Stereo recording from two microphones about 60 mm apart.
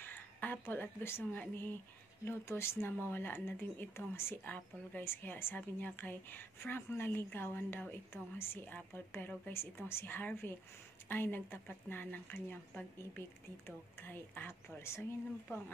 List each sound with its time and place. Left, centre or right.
0.0 s speech: left
13.7 s speech: left